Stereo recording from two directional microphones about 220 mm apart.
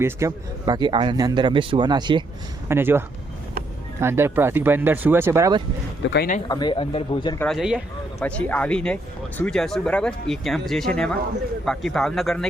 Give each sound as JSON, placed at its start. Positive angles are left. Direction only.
{"t": 0.0, "sound": "speech", "side_deg": -15}
{"t": 4.0, "sound": "speech", "side_deg": -10}
{"t": 6.1, "sound": "speech", "side_deg": 45}
{"t": 6.5, "sound": "speech", "side_deg": 20}
{"t": 7.3, "sound": "speech", "side_deg": 0}